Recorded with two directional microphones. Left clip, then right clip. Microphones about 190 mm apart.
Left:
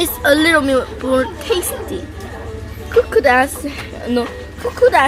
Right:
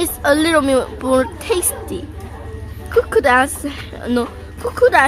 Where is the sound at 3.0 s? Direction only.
50° right (ahead or behind).